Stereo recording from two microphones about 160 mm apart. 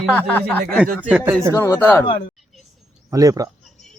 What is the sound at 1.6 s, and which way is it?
Speech, 15° left (ahead or behind).